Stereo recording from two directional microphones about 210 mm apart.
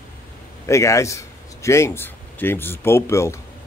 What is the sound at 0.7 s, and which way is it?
Speech, 15° left (ahead or behind).